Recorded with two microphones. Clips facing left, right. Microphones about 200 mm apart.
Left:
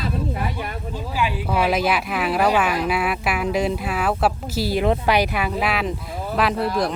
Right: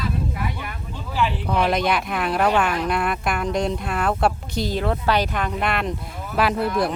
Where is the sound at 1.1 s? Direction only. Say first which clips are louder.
Right 1 dB; 10° left (ahead or behind).